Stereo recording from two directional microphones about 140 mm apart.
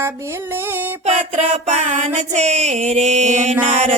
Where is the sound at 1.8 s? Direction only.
60° right (ahead or behind).